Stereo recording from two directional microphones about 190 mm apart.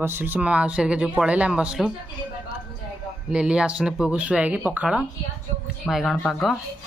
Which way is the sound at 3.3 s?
5° right (ahead or behind).